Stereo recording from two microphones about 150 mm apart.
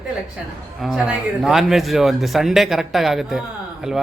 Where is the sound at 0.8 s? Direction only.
5° right (ahead or behind).